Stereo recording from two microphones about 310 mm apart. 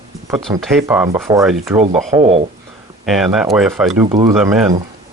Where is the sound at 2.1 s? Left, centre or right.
Centre.